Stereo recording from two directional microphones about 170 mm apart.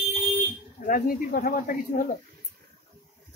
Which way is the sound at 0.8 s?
55° left (ahead or behind).